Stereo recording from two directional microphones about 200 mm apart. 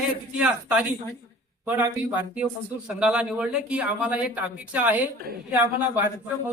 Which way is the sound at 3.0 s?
5° right (ahead or behind).